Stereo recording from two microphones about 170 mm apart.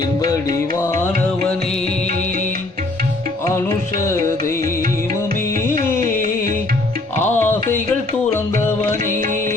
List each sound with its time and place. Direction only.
0.2 s music: 20° left (ahead or behind)
5.7 s music: 45° right (ahead or behind)
7.2 s music: 10° left (ahead or behind)